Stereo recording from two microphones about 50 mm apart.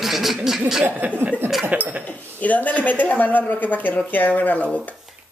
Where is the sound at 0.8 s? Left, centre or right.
Right.